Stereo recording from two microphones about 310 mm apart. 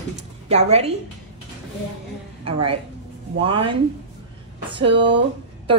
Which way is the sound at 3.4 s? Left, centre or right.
Centre.